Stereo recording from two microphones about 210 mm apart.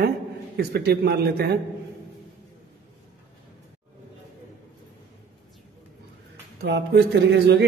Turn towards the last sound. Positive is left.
turn(degrees=-55)  # may be behind; listen again after turning